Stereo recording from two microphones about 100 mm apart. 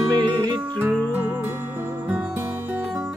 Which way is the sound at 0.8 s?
15° right (ahead or behind).